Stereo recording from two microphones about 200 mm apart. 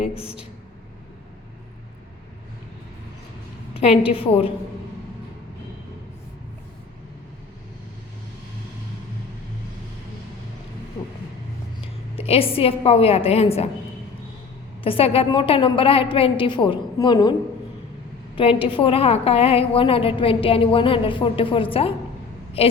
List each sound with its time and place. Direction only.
3.8 s a woman's voice: 30° left (ahead or behind)
12.1 s a woman's voice: 30° left (ahead or behind)
14.8 s a woman's voice: 30° left (ahead or behind)
18.3 s a woman's voice: 25° left (ahead or behind)